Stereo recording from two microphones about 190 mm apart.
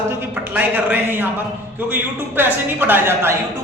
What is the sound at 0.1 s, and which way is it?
A woman's voice, 10° right (ahead or behind).